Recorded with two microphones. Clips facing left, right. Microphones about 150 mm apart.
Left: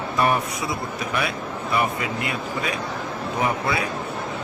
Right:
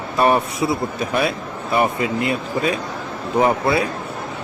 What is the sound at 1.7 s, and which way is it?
Speech, 30° right (ahead or behind).